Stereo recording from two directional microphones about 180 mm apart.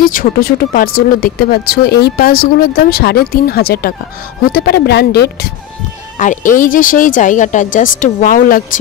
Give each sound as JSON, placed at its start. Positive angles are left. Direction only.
{"t": 0.0, "sound": "speech", "side_deg": 50}
{"t": 6.1, "sound": "speech", "side_deg": 45}